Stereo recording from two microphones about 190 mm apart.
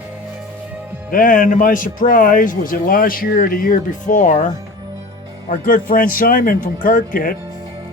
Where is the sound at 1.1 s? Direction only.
45° left (ahead or behind).